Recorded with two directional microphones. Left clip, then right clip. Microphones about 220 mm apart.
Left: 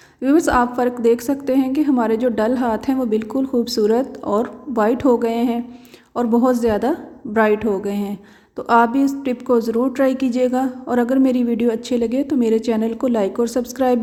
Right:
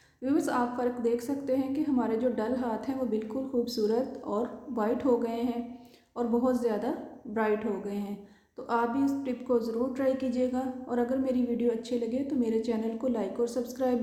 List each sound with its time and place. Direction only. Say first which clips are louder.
0.2 s a woman's voice: left 13 dB; 40° left (ahead or behind)